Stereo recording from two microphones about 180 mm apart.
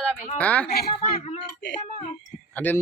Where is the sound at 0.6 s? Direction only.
60° left (ahead or behind).